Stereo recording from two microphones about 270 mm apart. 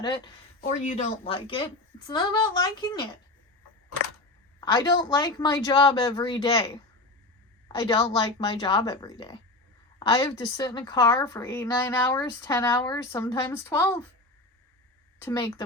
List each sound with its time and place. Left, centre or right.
0.0 s a woman's voice: centre
4.6 s a woman's voice: centre
7.8 s a woman's voice: centre
15.2 s a woman's voice: centre